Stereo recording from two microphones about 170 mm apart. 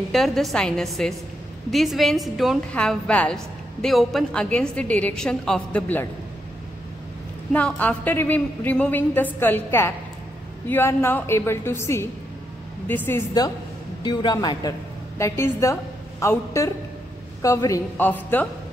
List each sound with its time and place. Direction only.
0.1 s a woman's voice: centre (ahead or behind)
7.5 s a woman's voice: 10° left (ahead or behind)